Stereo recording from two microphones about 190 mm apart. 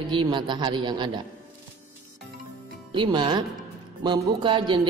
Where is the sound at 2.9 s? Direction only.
25° right (ahead or behind).